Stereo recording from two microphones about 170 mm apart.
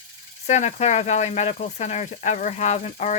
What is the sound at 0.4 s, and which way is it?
Speech, 40° left (ahead or behind).